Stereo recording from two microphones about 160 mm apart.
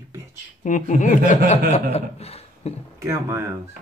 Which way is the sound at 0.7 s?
50° left (ahead or behind).